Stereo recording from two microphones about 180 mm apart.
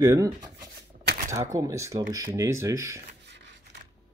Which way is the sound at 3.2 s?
75° right (ahead or behind).